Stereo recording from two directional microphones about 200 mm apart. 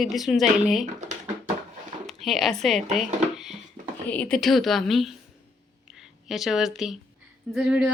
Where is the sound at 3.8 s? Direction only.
35° right (ahead or behind).